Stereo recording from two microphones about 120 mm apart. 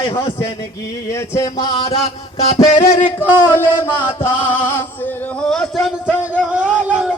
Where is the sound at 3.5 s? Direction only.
20° left (ahead or behind).